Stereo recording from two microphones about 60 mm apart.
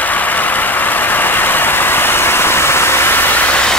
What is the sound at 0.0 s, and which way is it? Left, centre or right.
Vehicle, left.